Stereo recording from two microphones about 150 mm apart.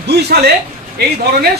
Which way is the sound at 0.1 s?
90° right.